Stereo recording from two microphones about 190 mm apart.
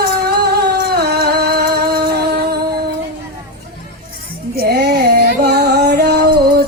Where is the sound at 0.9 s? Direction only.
55° right (ahead or behind).